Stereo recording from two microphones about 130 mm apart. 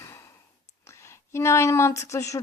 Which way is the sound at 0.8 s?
20° left (ahead or behind).